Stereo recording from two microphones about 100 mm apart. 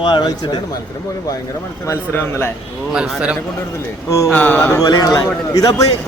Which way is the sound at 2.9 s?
10° right (ahead or behind).